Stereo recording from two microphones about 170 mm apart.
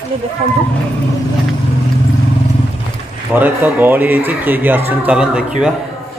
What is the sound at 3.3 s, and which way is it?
Speech, 10° right (ahead or behind).